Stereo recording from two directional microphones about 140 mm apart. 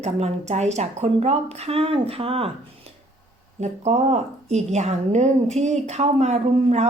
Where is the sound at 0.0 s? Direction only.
50° right (ahead or behind).